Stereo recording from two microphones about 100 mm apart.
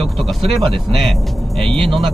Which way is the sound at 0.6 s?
Centre (ahead or behind).